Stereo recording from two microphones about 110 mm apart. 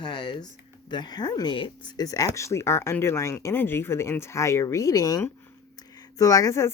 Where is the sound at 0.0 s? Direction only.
40° left (ahead or behind).